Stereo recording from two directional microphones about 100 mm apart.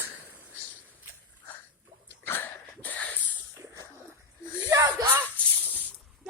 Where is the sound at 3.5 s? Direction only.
30° right (ahead or behind).